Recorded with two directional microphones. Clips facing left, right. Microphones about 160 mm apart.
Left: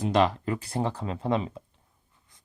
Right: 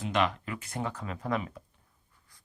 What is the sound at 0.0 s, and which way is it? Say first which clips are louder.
Speech: left 6 dB; 35° left (ahead or behind).